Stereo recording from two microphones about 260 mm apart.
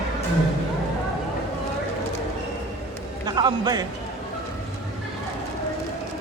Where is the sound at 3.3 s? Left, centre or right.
Centre.